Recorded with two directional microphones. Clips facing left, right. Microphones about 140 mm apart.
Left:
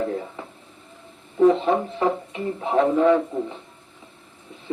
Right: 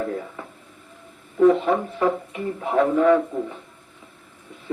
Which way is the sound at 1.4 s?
25° left (ahead or behind).